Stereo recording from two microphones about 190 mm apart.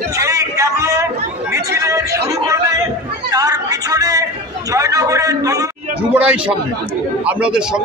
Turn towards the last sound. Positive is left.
turn(degrees=-5)  # may be behind; listen again after turning